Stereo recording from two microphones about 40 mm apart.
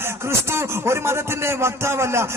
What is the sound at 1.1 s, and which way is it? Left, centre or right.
A man's voice, right.